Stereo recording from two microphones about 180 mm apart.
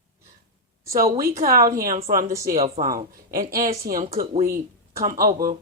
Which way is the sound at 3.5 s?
20° right (ahead or behind).